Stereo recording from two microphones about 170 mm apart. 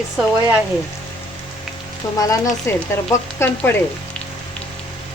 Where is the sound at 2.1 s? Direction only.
20° left (ahead or behind).